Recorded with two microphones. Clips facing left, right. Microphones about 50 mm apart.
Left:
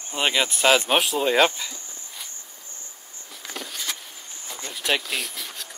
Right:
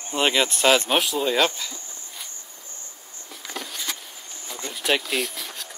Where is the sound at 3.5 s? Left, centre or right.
Centre.